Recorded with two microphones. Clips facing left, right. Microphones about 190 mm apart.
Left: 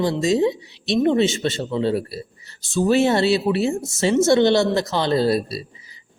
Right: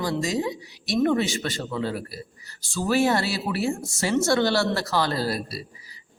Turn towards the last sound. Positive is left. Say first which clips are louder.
# left 8 dB
turn(degrees=25)  # may be behind; listen again after turning